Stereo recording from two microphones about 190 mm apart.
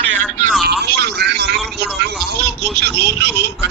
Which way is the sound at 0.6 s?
60° right (ahead or behind).